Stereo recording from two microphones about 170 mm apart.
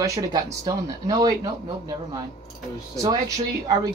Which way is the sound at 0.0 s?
20° right (ahead or behind).